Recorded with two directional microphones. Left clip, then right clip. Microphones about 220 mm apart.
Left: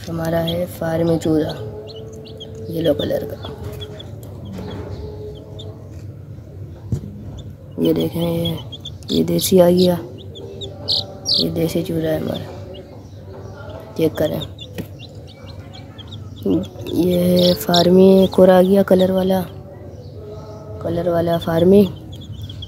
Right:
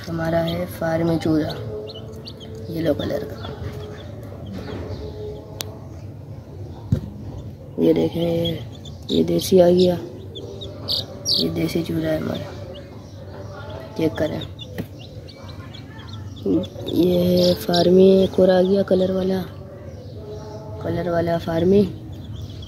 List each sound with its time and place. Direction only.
0.0 s speech: 10° left (ahead or behind)
2.7 s speech: 15° left (ahead or behind)
7.8 s speech: 15° left (ahead or behind)
10.9 s speech: 10° left (ahead or behind)
13.9 s speech: 15° left (ahead or behind)
16.9 s speech: 20° left (ahead or behind)
20.8 s speech: 10° left (ahead or behind)